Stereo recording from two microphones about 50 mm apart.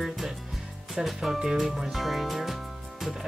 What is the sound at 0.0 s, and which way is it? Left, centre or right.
Music, centre.